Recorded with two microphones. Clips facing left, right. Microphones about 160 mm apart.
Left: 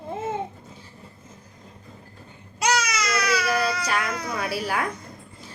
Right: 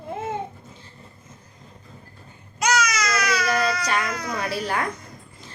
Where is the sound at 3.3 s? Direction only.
5° left (ahead or behind).